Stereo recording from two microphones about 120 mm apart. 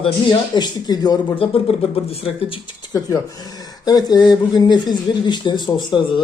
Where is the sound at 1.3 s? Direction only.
50° left (ahead or behind).